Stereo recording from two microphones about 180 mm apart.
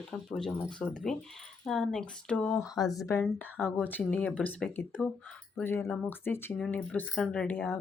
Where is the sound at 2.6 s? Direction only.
20° left (ahead or behind).